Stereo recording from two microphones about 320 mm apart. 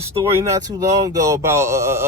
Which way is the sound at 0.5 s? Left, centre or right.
Centre.